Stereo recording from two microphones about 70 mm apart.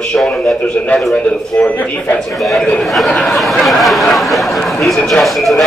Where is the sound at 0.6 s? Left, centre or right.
Centre.